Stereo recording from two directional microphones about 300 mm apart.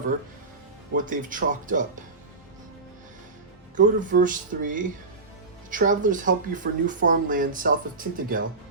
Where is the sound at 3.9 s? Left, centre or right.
Right.